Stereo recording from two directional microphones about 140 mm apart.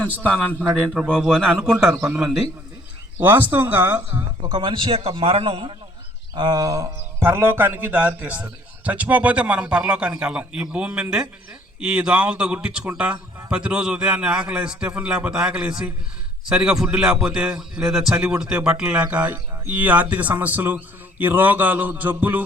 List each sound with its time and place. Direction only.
0.6 s a man's voice: 5° right (ahead or behind)
1.1 s a man's voice: 5° left (ahead or behind)
3.2 s a man's voice: 15° right (ahead or behind)
4.4 s a man's voice: 40° right (ahead or behind); by 22.4 s 15° right (ahead or behind)